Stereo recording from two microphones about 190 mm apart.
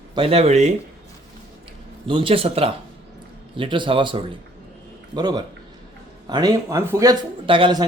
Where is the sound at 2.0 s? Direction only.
25° right (ahead or behind).